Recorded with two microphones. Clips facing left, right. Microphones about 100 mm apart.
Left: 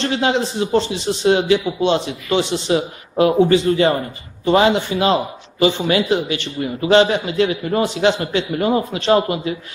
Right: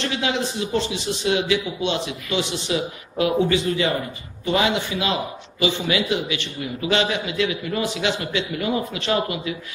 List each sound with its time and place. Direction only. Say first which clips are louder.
0.0 s a man's voice: left 6 dB; 35° left (ahead or behind)